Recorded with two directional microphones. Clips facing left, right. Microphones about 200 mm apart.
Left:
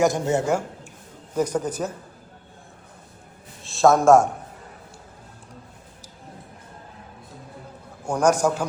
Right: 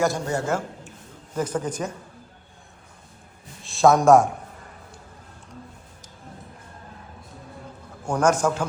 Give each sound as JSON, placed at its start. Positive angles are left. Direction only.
{"t": 0.0, "sound": "a woman's voice", "side_deg": 20}
{"t": 1.4, "sound": "a man's voice", "side_deg": 10}
{"t": 3.6, "sound": "a man's voice", "side_deg": 0}
{"t": 8.0, "sound": "a man's voice", "side_deg": 10}